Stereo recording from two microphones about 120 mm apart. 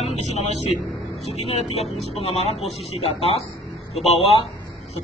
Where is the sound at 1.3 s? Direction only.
60° left (ahead or behind).